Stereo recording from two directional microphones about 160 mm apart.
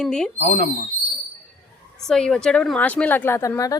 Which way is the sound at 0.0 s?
5° left (ahead or behind).